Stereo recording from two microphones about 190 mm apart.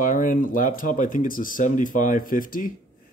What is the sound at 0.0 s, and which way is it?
Speech, 45° left (ahead or behind).